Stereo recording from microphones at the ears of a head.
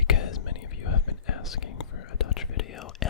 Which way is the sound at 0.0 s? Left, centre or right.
Left.